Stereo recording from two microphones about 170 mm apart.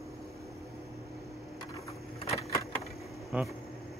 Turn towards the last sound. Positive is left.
turn(degrees=0)  # may be behind; listen again after turning